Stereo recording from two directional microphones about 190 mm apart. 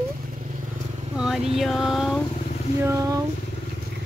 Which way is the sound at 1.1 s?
5° right (ahead or behind).